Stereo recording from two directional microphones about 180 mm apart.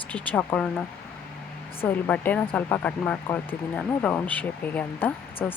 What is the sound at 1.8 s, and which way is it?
Speech, 10° left (ahead or behind).